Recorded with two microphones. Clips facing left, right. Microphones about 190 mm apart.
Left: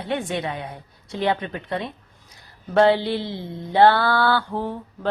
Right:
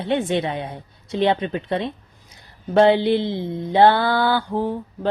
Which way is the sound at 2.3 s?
20° right (ahead or behind).